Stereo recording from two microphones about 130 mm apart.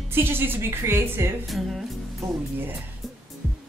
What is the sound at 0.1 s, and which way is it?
Speech, 15° right (ahead or behind).